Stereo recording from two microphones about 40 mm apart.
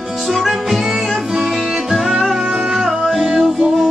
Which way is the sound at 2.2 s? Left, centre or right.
Centre.